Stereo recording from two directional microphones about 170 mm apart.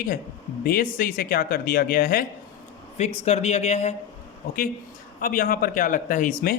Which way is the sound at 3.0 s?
40° left (ahead or behind).